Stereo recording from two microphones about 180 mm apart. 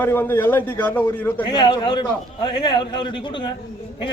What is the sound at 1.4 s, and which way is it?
A man's voice, 25° left (ahead or behind).